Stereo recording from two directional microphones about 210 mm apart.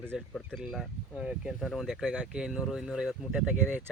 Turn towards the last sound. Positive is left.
turn(degrees=-5)  # may be behind; listen again after turning